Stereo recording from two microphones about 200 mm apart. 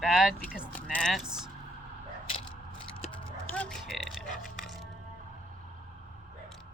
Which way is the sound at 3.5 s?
5° left (ahead or behind).